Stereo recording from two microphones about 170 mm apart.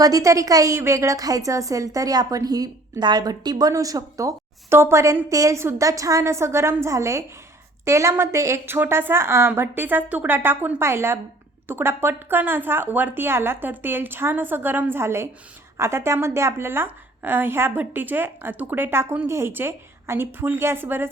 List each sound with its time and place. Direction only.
0.0 s a woman's voice: 20° right (ahead or behind)